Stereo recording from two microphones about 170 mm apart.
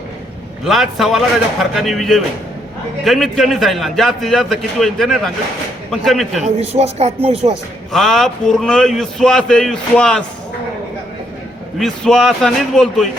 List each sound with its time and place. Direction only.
0.6 s a man's voice: centre (ahead or behind)
6.4 s speech: 40° right (ahead or behind)
7.9 s a man's voice: 5° left (ahead or behind)
11.8 s a man's voice: 5° left (ahead or behind)